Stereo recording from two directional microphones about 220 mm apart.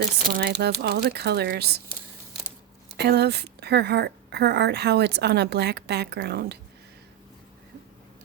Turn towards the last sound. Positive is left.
turn(degrees=-50)  # may be behind; listen again after turning